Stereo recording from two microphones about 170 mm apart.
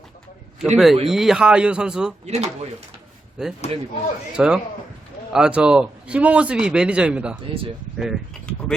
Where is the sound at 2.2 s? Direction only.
40° right (ahead or behind).